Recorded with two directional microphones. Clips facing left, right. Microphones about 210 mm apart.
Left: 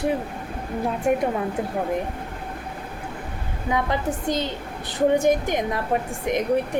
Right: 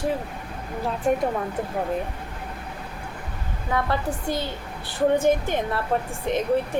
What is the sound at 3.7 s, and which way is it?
A woman's voice, 15° left (ahead or behind).